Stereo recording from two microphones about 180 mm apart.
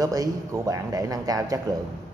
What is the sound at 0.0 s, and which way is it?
Speech, 20° right (ahead or behind).